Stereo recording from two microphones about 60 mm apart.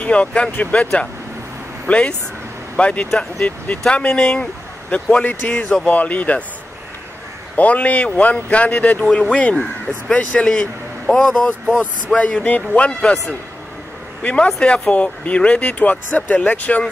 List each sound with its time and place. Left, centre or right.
0.0 s speech: left
1.9 s speech: left
4.9 s speech: left
7.5 s speech: left
11.1 s speech: centre
12.2 s speech: centre
14.2 s speech: centre